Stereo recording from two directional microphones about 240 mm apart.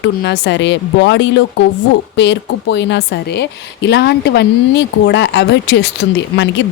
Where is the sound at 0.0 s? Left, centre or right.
Left.